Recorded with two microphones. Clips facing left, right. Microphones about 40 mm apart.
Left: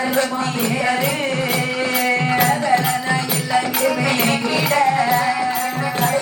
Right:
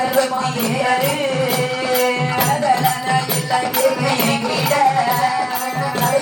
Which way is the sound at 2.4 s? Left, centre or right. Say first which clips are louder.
Right 4 dB; centre.